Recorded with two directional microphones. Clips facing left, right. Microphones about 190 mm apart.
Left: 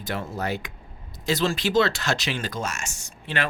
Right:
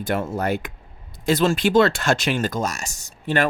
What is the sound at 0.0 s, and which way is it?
Speech, 50° right (ahead or behind).